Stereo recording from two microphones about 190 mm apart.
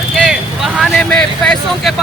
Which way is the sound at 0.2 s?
Centre (ahead or behind).